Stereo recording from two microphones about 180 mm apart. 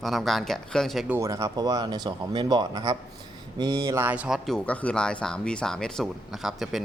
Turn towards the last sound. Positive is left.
turn(degrees=0)  # may be behind; listen again after turning